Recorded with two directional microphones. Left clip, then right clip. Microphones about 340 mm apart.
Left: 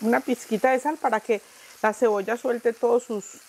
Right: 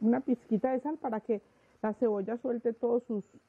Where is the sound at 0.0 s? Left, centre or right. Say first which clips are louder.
Left 7 dB; centre.